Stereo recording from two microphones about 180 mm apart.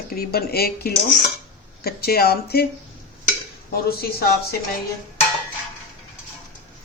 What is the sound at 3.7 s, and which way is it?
Speech, 60° left (ahead or behind).